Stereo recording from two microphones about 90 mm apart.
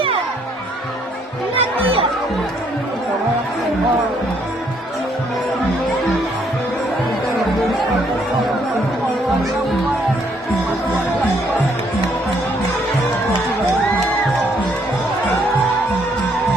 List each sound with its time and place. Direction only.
1.5 s music: 90° right
7.3 s music: centre (ahead or behind)